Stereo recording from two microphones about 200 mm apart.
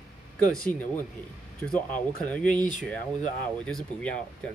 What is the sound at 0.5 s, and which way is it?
Speech, 5° left (ahead or behind).